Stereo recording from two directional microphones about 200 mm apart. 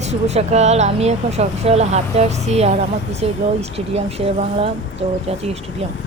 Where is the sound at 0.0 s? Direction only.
35° right (ahead or behind).